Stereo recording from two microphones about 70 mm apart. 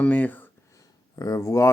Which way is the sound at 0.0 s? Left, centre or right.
Left.